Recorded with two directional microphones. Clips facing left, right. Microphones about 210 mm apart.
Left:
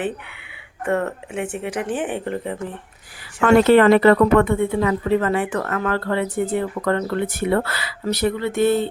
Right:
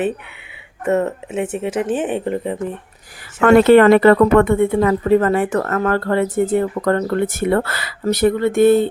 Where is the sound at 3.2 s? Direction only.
55° right (ahead or behind).